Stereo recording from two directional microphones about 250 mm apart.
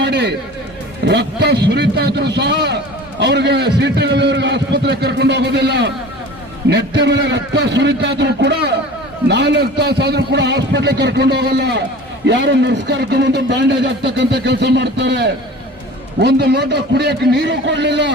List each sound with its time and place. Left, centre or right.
0.0 s music: right
1.0 s a man's voice: right